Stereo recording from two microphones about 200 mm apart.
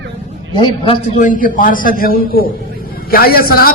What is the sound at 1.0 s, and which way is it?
A man's voice, 40° left (ahead or behind).